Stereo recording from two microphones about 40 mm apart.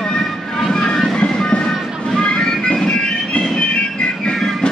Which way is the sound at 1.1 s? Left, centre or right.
Left.